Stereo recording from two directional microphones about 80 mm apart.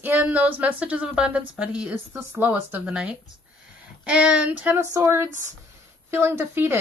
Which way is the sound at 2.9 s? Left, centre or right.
Centre.